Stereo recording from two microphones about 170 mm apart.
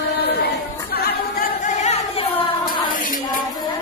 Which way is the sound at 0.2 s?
70° left (ahead or behind).